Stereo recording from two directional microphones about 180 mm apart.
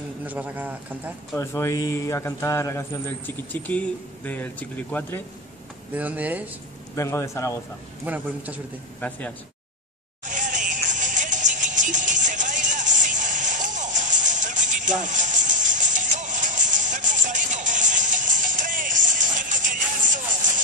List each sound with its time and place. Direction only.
0.2 s speech: 10° right (ahead or behind)
1.3 s a man's voice: 15° left (ahead or behind)
5.9 s speech: 10° right (ahead or behind)
7.0 s a man's voice: 15° left (ahead or behind)
8.0 s speech: 10° right (ahead or behind)
9.0 s a man's voice: 10° left (ahead or behind)
10.2 s music: 45° right (ahead or behind)